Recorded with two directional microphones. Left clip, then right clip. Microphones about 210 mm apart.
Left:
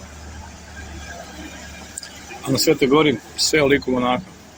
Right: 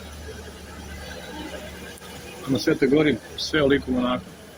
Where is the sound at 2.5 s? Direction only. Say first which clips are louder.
Left 4 dB; 20° left (ahead or behind).